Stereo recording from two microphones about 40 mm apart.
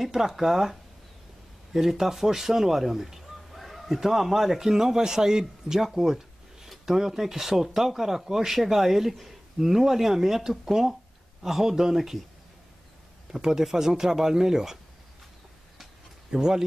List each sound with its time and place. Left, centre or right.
0.0 s speech: centre
5.9 s a sound: centre
6.9 s speech: centre
13.3 s speech: centre
16.3 s speech: centre